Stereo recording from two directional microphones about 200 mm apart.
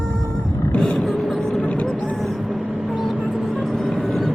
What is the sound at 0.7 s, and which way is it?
Vehicle, 5° left (ahead or behind).